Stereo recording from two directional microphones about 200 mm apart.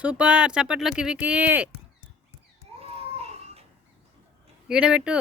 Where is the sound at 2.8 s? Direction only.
30° right (ahead or behind).